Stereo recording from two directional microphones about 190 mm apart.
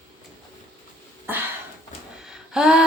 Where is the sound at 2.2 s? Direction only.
5° right (ahead or behind).